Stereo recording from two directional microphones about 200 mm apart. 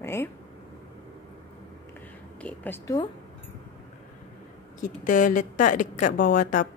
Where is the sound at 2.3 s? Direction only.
10° left (ahead or behind).